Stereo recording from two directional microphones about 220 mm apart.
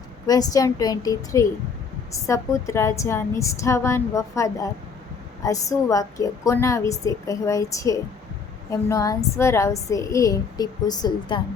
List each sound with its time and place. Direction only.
0.3 s a woman's voice: 15° left (ahead or behind)